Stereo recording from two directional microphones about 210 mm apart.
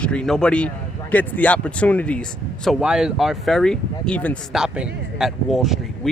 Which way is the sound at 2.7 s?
5° right (ahead or behind).